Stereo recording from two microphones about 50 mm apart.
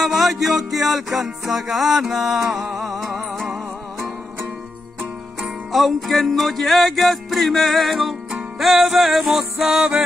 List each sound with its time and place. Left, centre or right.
0.0 s music: centre
2.4 s music: right
3.3 s music: centre
5.4 s music: centre
9.8 s music: centre